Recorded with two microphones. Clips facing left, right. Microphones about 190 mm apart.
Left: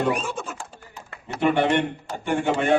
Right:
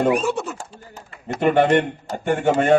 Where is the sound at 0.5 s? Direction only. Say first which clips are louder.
Right 2 dB; 40° right (ahead or behind).